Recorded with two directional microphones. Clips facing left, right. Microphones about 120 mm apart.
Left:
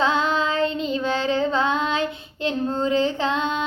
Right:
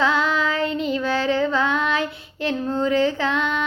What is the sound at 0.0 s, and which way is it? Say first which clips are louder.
Child singing: even; 20° left (ahead or behind).